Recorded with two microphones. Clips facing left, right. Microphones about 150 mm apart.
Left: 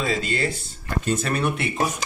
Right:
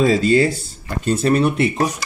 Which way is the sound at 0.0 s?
40° right (ahead or behind).